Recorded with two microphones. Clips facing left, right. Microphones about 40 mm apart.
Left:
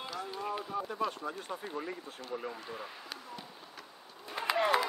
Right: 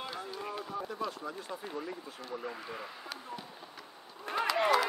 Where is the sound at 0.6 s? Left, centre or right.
Centre.